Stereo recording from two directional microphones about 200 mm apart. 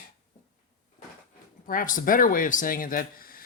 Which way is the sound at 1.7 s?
45° left (ahead or behind).